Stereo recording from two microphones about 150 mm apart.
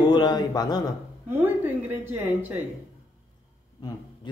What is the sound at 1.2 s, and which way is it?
A woman's voice, 15° right (ahead or behind).